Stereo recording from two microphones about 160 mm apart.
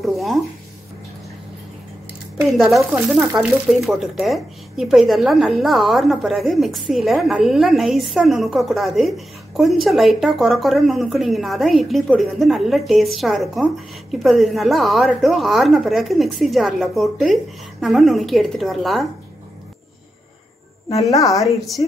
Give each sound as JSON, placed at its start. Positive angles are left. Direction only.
{"t": 0.0, "sound": "speech", "side_deg": 0}
{"t": 2.5, "sound": "speech", "side_deg": 0}
{"t": 21.0, "sound": "a woman's voice", "side_deg": 20}
{"t": 21.3, "sound": "speech", "side_deg": 0}